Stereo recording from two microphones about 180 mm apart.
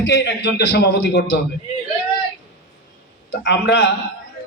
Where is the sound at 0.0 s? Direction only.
70° left (ahead or behind).